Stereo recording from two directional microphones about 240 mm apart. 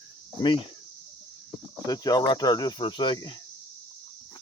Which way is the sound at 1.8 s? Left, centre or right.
Centre.